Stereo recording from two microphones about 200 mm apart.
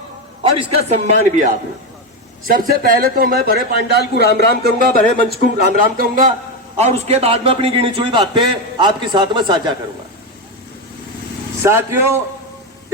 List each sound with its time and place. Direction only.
0.6 s a man's voice: 35° right (ahead or behind)
2.5 s a man's voice: 45° right (ahead or behind)
6.7 s a man's voice: 35° right (ahead or behind)
11.6 s a man's voice: 15° right (ahead or behind)